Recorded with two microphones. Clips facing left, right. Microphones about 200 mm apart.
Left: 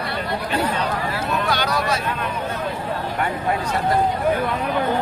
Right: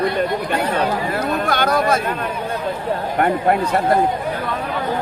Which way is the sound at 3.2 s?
55° right (ahead or behind).